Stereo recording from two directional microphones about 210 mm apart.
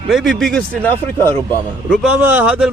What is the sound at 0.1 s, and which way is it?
A man's voice, centre (ahead or behind).